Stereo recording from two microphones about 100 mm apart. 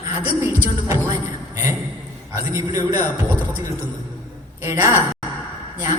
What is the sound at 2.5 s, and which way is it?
Speech, 35° right (ahead or behind).